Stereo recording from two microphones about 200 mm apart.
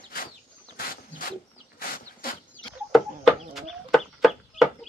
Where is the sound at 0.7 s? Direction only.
45° left (ahead or behind).